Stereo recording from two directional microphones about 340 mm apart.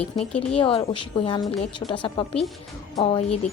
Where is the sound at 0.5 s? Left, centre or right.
Centre.